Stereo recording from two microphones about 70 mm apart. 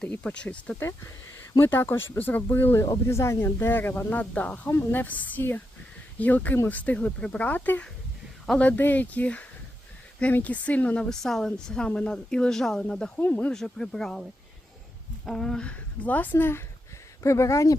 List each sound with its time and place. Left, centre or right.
0.1 s speech: left
1.5 s speech: left
3.1 s a woman's voice: left; by 13.1 s centre
13.1 s speech: left
13.5 s a woman's voice: centre; by 16.6 s left
17.2 s speech: left